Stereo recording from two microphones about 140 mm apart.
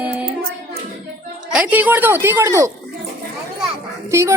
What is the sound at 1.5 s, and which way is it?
Speech, 10° right (ahead or behind).